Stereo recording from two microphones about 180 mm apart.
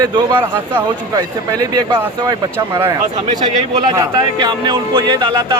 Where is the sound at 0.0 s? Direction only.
25° right (ahead or behind).